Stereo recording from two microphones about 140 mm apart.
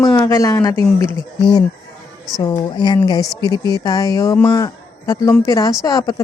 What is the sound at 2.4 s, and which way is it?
A woman's voice, 30° left (ahead or behind).